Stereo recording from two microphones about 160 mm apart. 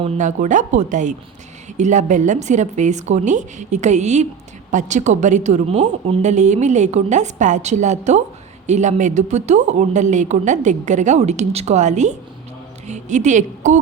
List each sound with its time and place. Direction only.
0.2 s a woman's voice: 50° right (ahead or behind)